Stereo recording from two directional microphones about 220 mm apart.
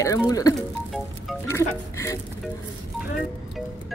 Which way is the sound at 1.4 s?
10° left (ahead or behind).